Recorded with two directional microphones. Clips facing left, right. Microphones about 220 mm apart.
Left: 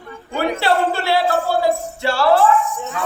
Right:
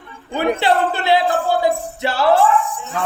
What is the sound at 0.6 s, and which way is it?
Music, 20° right (ahead or behind).